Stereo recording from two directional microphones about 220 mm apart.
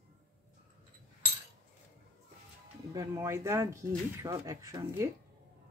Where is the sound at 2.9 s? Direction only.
15° right (ahead or behind).